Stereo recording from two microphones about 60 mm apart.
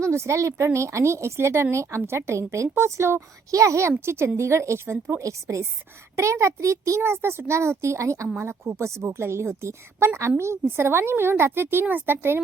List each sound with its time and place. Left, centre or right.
0.0 s speech: right
3.5 s speech: right
5.2 s a child's voice: right
7.0 s speech: right
8.4 s a woman's voice: right